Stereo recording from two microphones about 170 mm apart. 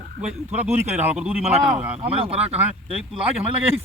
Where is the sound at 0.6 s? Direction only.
10° right (ahead or behind).